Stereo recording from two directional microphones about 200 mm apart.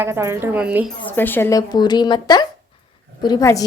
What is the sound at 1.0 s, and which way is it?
Speech, 10° left (ahead or behind).